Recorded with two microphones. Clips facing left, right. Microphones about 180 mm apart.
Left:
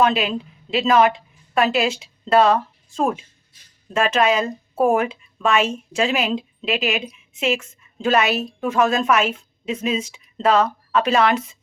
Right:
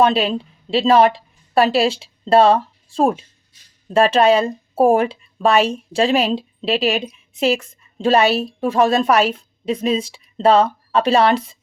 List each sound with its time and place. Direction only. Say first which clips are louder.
0.0 s a woman's voice: right 3 dB; 30° right (ahead or behind)